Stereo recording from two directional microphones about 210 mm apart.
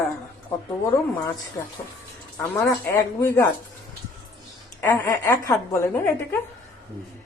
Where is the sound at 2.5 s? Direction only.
10° left (ahead or behind).